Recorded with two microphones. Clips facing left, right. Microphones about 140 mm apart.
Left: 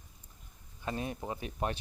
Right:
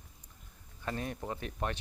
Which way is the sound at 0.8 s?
15° left (ahead or behind).